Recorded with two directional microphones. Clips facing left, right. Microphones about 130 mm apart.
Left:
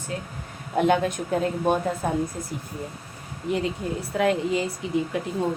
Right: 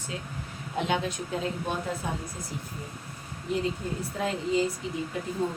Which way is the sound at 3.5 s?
75° left (ahead or behind).